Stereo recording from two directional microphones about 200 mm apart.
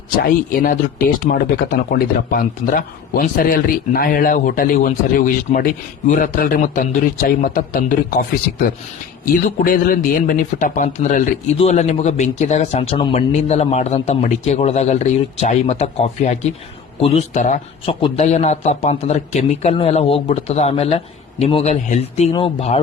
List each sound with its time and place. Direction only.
0.2 s speech: 45° left (ahead or behind)
9.2 s speech: 45° left (ahead or behind); by 22.8 s 30° left (ahead or behind)